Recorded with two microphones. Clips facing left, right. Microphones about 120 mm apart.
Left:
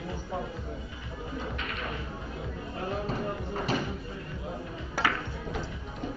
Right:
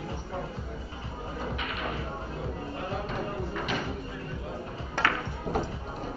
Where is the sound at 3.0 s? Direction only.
40° left (ahead or behind).